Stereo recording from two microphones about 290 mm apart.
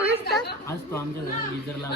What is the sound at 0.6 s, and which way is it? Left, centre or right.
Speech, centre.